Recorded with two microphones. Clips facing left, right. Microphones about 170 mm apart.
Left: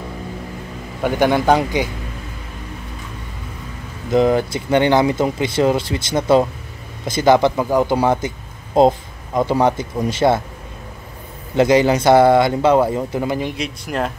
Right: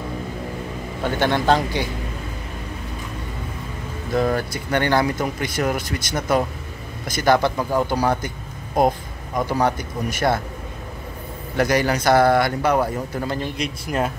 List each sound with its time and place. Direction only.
1.0 s speech: 10° left (ahead or behind)
4.1 s speech: 20° left (ahead or behind)
11.5 s speech: 25° left (ahead or behind)
13.6 s speech: centre (ahead or behind)